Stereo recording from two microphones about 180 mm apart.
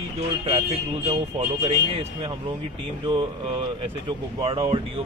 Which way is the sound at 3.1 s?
25° right (ahead or behind).